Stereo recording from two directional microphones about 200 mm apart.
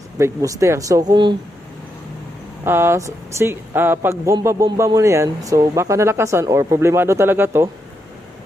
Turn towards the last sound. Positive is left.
turn(degrees=-10)  # may be behind; listen again after turning